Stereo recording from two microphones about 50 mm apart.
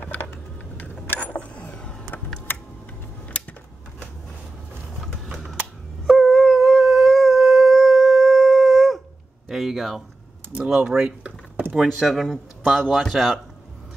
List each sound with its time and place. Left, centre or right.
1.3 s a sound: left
2.5 s typing: left
3.3 s typewriter: left
5.0 s a sound: centre
6.0 s dog: centre
9.5 s a sound: centre
10.6 s speech: centre
11.7 s speech: centre
12.1 s speech: centre